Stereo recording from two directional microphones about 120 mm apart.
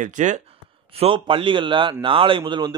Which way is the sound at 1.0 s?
45° right (ahead or behind).